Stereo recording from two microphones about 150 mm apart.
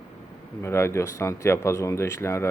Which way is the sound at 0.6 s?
15° left (ahead or behind).